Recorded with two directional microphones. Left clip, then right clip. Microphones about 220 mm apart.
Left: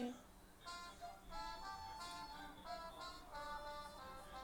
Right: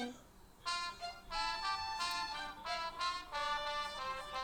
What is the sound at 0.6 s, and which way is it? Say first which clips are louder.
Vehicle: right 13 dB; 40° right (ahead or behind).